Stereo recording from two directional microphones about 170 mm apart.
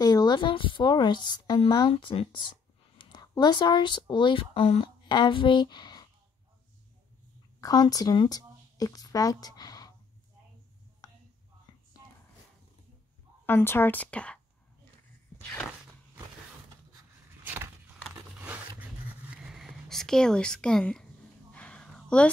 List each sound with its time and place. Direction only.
0.0 s speech: 25° left (ahead or behind)
7.6 s speech: 20° left (ahead or behind)
13.5 s a woman's voice: 15° left (ahead or behind)
17.4 s a sound: 10° right (ahead or behind)
18.0 s biting: 10° right (ahead or behind)
18.8 s writing: 5° right (ahead or behind)
21.5 s a sound: 5° left (ahead or behind)